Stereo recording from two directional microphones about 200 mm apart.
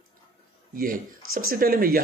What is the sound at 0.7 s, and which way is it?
A man's voice, 45° right (ahead or behind).